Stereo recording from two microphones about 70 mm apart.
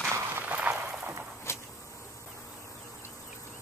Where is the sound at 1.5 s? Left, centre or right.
Left.